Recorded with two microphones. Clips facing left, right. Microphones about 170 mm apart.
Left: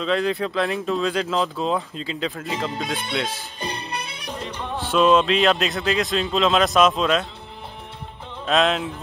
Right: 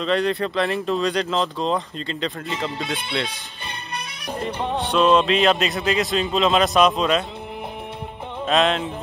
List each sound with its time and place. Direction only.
0.0 s speech: centre (ahead or behind)
4.3 s music: 55° right (ahead or behind)
4.8 s speech: centre (ahead or behind)
8.5 s speech: centre (ahead or behind)